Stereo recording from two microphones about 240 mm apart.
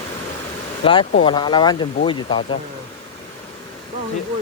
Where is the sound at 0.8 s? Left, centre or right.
Left.